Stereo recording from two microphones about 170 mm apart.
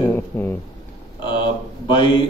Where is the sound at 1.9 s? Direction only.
25° left (ahead or behind).